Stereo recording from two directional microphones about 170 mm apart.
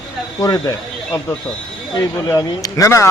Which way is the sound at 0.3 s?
20° left (ahead or behind).